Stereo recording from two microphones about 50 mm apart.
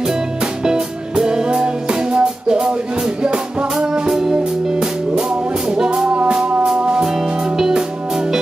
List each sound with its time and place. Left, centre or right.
0.7 s music: centre
3.7 s music: centre